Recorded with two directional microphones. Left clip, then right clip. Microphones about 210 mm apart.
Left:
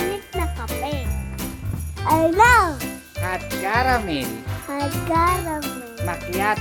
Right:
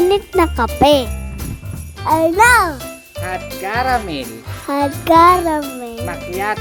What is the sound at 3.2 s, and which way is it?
Speech, 15° right (ahead or behind).